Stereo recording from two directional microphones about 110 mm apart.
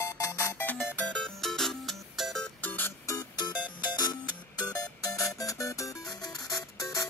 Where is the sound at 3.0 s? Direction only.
35° left (ahead or behind).